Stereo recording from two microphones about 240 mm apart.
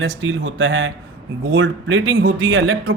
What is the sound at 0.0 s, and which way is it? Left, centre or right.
Speech, right.